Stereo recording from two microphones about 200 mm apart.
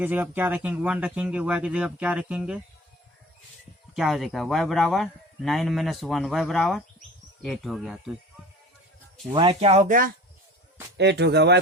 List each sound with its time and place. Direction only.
0.0 s speech: 10° right (ahead or behind)
3.9 s a man's voice: centre (ahead or behind)
9.3 s speech: 25° right (ahead or behind); by 10.1 s 40° right (ahead or behind)
10.9 s speech: 60° right (ahead or behind)